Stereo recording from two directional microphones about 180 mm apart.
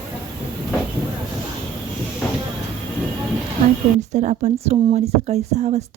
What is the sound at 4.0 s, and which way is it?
Speech, 40° right (ahead or behind).